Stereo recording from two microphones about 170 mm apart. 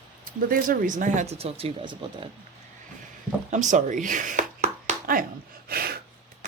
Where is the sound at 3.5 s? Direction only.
45° right (ahead or behind).